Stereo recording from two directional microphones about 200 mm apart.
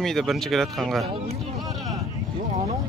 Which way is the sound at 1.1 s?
25° right (ahead or behind).